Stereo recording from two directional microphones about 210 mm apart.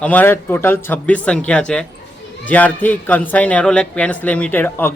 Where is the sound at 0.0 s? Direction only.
10° left (ahead or behind).